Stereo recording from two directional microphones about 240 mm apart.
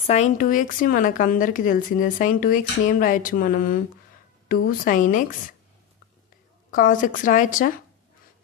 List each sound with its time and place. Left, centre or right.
0.0 s speech: left
6.7 s speech: left